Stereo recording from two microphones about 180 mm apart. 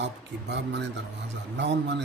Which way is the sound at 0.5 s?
80° right.